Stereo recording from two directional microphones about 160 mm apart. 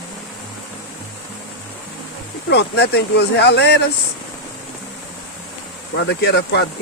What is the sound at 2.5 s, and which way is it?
Speech, 90° left.